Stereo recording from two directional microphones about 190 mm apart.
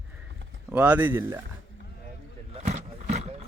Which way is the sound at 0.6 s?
10° right (ahead or behind).